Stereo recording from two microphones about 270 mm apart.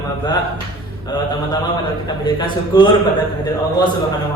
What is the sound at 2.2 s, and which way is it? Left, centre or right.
Speech, centre.